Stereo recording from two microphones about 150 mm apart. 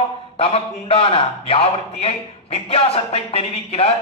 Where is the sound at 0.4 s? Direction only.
40° left (ahead or behind).